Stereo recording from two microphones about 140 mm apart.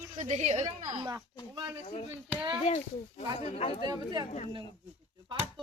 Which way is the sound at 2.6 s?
50° left (ahead or behind).